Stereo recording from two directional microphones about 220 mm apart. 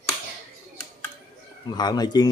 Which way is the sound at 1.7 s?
20° left (ahead or behind).